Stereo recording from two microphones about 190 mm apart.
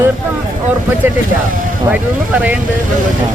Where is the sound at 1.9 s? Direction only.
10° right (ahead or behind).